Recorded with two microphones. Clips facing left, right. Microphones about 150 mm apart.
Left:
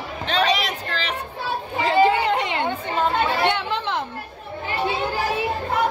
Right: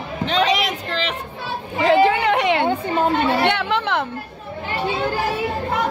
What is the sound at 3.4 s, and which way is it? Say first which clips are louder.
Chatter: right 3 dB; 65° right (ahead or behind).